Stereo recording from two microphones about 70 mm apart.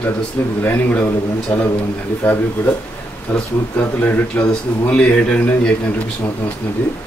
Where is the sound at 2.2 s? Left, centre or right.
Left.